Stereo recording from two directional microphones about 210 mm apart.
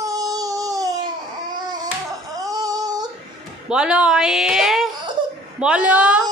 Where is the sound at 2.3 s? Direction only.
15° right (ahead or behind).